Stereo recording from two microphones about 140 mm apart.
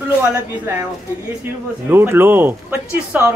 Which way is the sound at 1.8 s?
15° right (ahead or behind).